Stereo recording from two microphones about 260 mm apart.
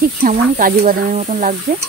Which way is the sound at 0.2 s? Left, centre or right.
Right.